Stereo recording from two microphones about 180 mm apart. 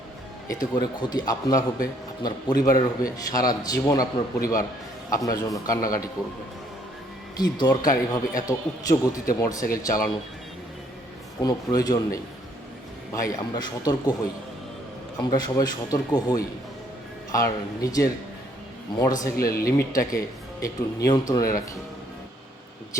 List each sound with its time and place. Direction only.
0.4 s a man's voice: 20° left (ahead or behind)
5.1 s a man's voice: 20° left (ahead or behind)
7.3 s a man's voice: 20° left (ahead or behind)
11.4 s a man's voice: 20° left (ahead or behind)
13.2 s a man's voice: 20° left (ahead or behind)
15.2 s a man's voice: 20° left (ahead or behind)
19.4 s speech: 55° left (ahead or behind)
19.6 s a man's voice: 15° left (ahead or behind)